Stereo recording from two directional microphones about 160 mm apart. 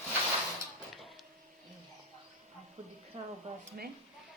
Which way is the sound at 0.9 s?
Centre (ahead or behind).